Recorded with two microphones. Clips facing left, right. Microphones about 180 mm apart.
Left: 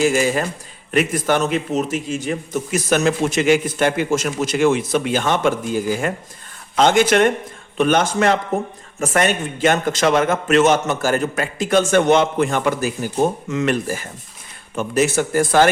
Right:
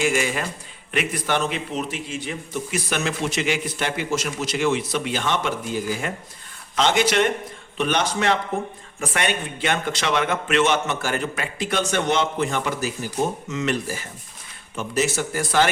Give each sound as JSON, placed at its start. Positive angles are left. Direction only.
{"t": 0.0, "sound": "a man's voice", "side_deg": 40}